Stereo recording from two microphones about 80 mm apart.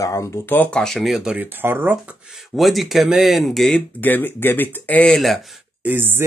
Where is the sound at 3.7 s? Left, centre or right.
Left.